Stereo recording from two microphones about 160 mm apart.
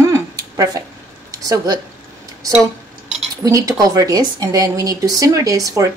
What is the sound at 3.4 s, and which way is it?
Speech, 20° right (ahead or behind).